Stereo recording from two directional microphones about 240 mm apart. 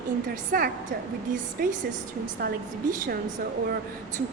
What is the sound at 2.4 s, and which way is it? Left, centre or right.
Speech, right.